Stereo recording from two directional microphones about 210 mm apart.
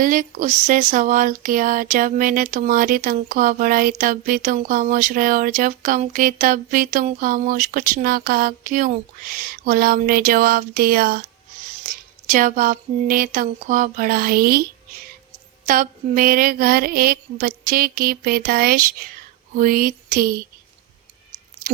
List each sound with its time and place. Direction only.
0.0 s speech: 40° right (ahead or behind)
12.3 s speech: 40° right (ahead or behind)
15.6 s mantra: 40° right (ahead or behind)